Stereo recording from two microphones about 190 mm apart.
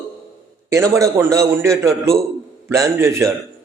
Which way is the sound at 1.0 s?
15° right (ahead or behind).